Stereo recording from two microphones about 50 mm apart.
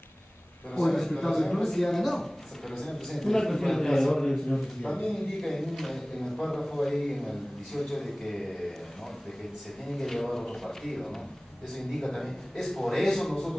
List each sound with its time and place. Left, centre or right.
0.7 s a man's voice: centre
9.8 s a man's voice: centre